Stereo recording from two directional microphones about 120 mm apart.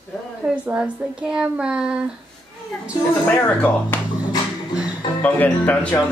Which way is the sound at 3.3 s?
15° left (ahead or behind).